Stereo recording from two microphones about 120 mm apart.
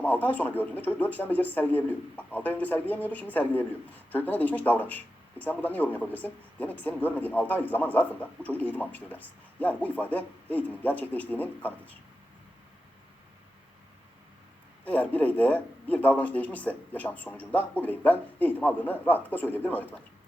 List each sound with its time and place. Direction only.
0.0 s a man's voice: 15° left (ahead or behind)
14.8 s a man's voice: 15° left (ahead or behind)